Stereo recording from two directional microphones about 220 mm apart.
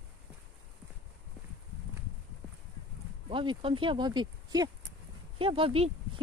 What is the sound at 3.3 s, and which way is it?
Speech, 20° right (ahead or behind).